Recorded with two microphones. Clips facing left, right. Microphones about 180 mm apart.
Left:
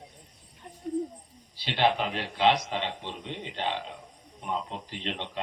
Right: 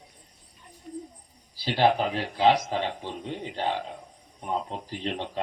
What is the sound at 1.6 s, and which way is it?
A man's voice, 40° right (ahead or behind).